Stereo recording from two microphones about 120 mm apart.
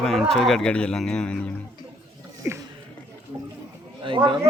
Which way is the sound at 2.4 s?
15° right (ahead or behind).